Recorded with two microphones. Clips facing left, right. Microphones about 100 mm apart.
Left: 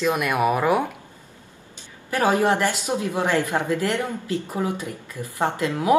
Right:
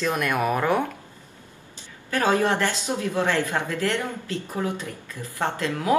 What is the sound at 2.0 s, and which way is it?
Speech, 15° left (ahead or behind).